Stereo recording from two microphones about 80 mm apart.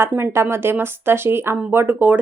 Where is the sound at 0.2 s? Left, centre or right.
Right.